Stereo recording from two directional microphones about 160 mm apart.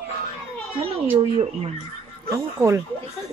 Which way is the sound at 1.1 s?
35° right (ahead or behind).